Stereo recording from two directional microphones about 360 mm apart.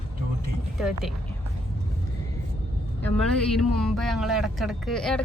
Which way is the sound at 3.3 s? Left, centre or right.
Centre.